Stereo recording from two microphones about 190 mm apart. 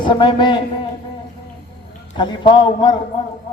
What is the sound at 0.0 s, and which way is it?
Speech, 25° left (ahead or behind).